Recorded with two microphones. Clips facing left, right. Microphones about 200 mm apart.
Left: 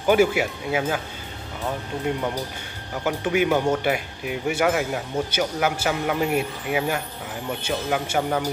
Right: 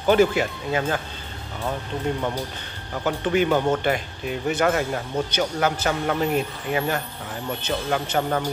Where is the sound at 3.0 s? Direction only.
10° left (ahead or behind).